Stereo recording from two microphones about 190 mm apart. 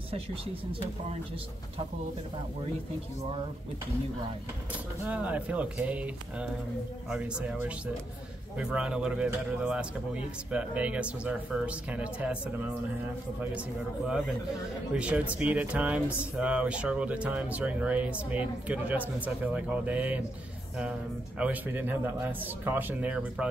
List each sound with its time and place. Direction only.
0.1 s speech: 30° right (ahead or behind)
5.0 s speech: 10° right (ahead or behind)
21.4 s speech: 10° right (ahead or behind)